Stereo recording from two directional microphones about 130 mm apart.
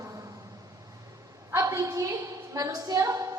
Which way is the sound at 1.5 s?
25° right (ahead or behind).